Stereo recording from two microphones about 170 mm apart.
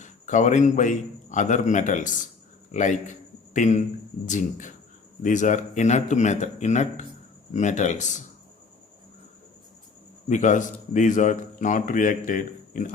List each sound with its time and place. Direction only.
0.0 s a man's voice: 45° left (ahead or behind)
10.2 s a man's voice: 45° left (ahead or behind)